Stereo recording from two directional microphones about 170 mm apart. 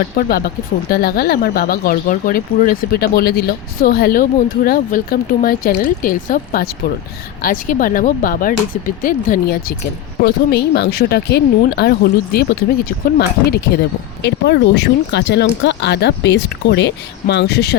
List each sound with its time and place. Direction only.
0.2 s speech: 60° left (ahead or behind)
14.3 s speech: 90° left